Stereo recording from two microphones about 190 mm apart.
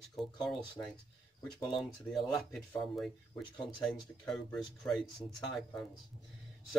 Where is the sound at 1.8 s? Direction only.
Centre (ahead or behind).